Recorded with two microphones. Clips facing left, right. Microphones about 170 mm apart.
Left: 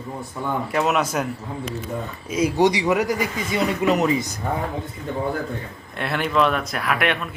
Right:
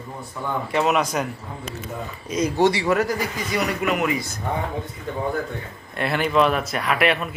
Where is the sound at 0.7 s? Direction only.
Centre (ahead or behind).